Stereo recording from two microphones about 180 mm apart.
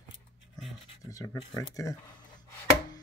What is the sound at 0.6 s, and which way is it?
Scratch, 20° left (ahead or behind).